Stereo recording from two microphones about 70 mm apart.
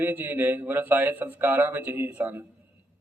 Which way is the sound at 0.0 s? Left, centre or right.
Right.